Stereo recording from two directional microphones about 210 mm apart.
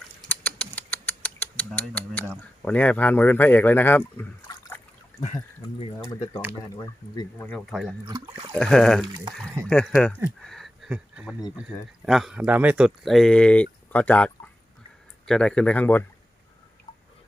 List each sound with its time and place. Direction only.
0.2 s mechanisms: 5° left (ahead or behind)
2.6 s speech: 5° left (ahead or behind)
6.1 s speech: 15° left (ahead or behind)
7.3 s speech: 5° left (ahead or behind)
8.0 s speech: 20° right (ahead or behind)
8.5 s speech: 5° left (ahead or behind)
10.4 s a sound: centre (ahead or behind)
12.0 s speech: centre (ahead or behind)